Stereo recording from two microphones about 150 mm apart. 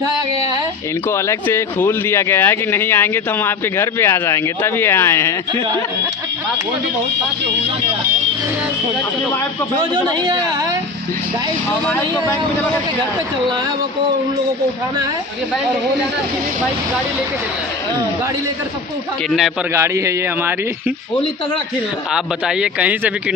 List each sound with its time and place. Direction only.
1.1 s speech: 15° left (ahead or behind)
19.7 s speech: 20° right (ahead or behind)
22.1 s speech: 5° right (ahead or behind)